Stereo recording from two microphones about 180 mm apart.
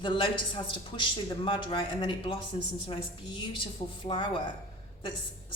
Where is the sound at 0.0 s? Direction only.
30° left (ahead or behind).